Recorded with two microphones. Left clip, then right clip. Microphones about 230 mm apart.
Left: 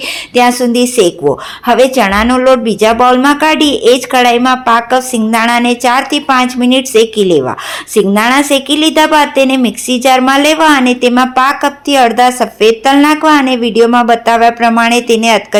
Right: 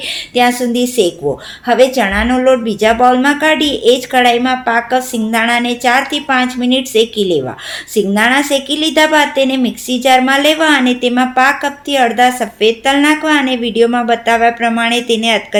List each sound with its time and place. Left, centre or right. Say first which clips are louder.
0.3 s a woman's voice: left 4 dB; centre